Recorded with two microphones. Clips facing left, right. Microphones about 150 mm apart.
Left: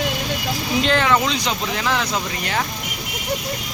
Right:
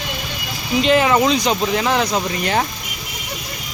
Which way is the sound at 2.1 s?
30° right (ahead or behind).